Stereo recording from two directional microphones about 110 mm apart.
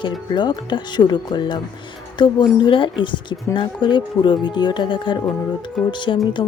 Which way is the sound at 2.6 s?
50° left (ahead or behind).